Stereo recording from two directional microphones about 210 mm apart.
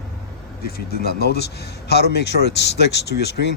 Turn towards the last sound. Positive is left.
turn(degrees=55)  # may be behind; listen again after turning